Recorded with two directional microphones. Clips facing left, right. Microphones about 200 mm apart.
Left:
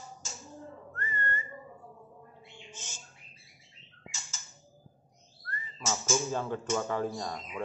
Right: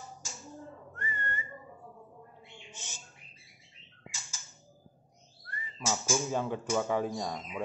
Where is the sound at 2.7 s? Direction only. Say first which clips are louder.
Left 1 dB; 15° right (ahead or behind).